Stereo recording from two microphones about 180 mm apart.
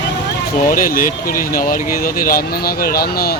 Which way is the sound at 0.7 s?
50° left (ahead or behind).